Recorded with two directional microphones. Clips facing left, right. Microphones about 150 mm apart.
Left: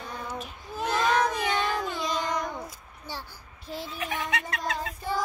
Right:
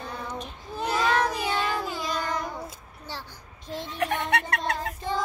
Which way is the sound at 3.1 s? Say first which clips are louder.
Even; 10° left (ahead or behind).